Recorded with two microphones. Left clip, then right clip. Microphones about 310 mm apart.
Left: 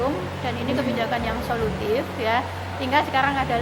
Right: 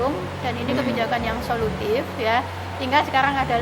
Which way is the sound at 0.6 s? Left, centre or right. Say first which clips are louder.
Right 1 dB; centre.